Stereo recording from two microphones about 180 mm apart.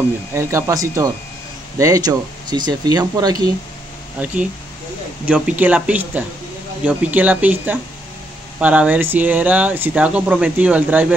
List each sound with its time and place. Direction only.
0.3 s speech: 15° right (ahead or behind)
4.2 s speech: 10° right (ahead or behind)